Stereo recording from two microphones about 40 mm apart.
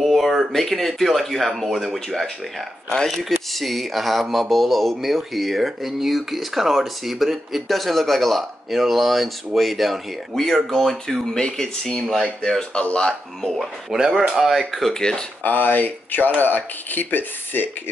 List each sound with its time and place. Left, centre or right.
0.0 s a sound: centre
0.5 s speech: centre
2.9 s speech: centre
3.5 s speech: centre; by 13.5 s left
13.5 s speech: centre
13.9 s speech: centre
14.7 s speech: centre
15.4 s speech: left